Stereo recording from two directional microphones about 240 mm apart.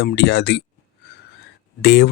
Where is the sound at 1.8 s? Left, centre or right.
Left.